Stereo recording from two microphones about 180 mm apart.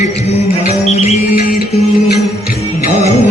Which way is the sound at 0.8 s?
40° left (ahead or behind).